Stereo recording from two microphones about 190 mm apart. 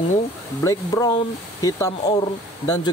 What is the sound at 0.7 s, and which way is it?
Speech, 15° left (ahead or behind).